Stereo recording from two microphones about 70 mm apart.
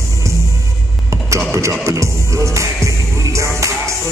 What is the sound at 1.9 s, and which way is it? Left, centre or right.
Music, right.